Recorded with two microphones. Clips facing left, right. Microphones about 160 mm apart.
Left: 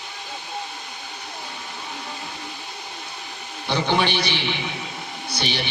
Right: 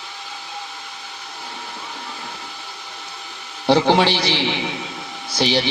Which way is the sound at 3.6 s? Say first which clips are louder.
Right 7 dB; 90° right.